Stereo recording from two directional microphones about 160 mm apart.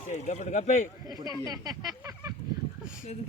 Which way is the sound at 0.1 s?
45° left (ahead or behind).